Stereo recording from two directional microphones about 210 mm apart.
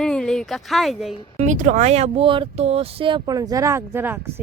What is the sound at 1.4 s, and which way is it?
Speech, 35° right (ahead or behind).